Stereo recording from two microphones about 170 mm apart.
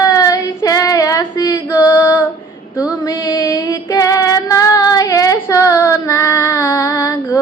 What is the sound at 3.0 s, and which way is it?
Female singing, 25° left (ahead or behind).